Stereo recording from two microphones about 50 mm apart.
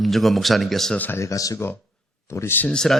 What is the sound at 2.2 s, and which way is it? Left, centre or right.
Speech, left.